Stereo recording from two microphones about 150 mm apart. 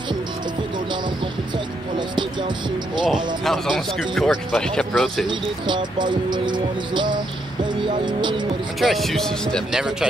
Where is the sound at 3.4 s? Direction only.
Centre (ahead or behind).